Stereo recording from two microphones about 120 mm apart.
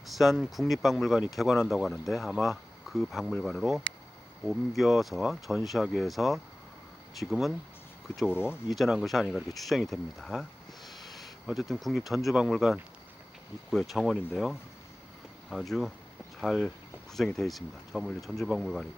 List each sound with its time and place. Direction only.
0.1 s speech: centre (ahead or behind)
8.3 s speech: 20° left (ahead or behind)
8.7 s speech: centre (ahead or behind)